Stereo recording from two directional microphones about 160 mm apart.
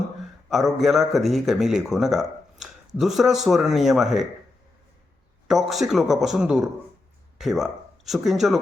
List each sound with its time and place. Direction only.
0.5 s a man's voice: centre (ahead or behind)
5.5 s a man's voice: centre (ahead or behind)